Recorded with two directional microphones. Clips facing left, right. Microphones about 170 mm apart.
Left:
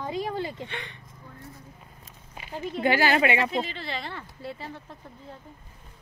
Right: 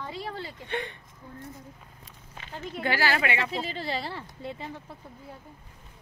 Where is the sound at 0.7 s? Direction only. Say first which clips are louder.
Right 6 dB; 50° right (ahead or behind).